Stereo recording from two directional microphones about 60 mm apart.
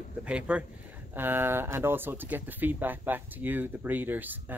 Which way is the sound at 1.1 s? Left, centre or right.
Right.